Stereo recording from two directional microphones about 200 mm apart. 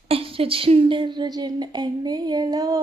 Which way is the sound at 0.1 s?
30° right (ahead or behind).